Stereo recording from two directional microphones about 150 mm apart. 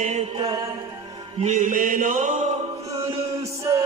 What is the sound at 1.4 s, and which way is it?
Mantra, 55° right (ahead or behind).